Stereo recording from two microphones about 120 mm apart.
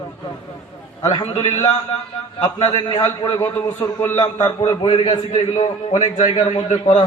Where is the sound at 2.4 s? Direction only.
50° left (ahead or behind).